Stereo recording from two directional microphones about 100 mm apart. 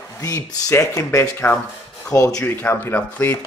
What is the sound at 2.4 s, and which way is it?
Speech, 20° left (ahead or behind).